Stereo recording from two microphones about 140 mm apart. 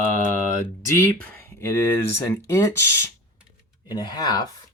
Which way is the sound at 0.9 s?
20° left (ahead or behind).